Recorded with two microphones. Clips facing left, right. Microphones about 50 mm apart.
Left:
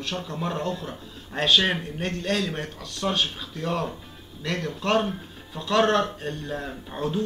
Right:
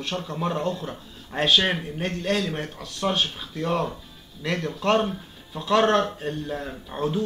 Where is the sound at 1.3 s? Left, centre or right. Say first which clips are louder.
Even; right.